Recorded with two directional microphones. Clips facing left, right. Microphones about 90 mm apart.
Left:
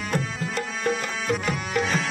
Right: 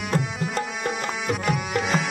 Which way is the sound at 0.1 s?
25° right (ahead or behind).